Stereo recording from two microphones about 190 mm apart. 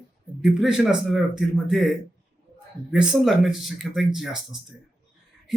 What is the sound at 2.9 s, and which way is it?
Speech, 5° right (ahead or behind).